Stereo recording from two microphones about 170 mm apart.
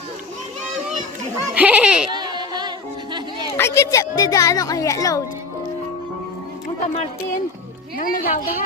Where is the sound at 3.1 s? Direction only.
25° right (ahead or behind).